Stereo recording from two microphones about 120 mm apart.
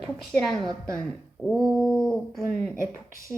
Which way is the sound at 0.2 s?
Centre (ahead or behind).